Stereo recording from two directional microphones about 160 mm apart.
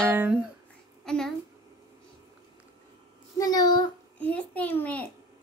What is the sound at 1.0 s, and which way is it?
Speech, 5° left (ahead or behind).